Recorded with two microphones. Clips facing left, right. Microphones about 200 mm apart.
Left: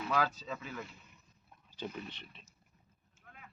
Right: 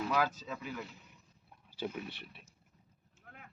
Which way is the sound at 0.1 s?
10° right (ahead or behind).